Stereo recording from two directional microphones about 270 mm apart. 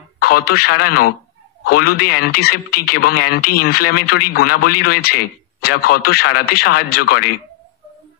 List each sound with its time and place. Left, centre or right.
0.2 s speech: left